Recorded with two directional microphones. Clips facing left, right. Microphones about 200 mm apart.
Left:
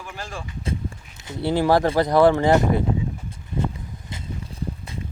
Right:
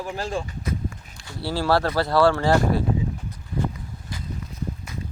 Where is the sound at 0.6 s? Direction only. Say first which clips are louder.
Even; 25° left (ahead or behind).